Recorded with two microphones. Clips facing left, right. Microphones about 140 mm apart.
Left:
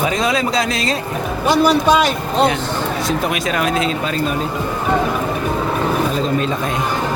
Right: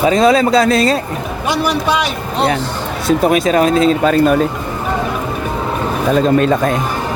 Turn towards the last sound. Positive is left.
turn(degrees=-50)  # may be behind; listen again after turning